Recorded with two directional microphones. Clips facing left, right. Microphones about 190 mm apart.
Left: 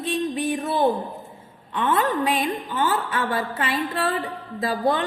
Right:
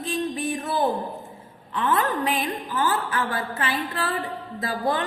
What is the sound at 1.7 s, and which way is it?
A woman's voice, 25° left (ahead or behind).